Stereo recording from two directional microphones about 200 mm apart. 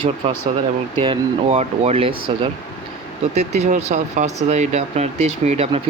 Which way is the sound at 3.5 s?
35° right (ahead or behind).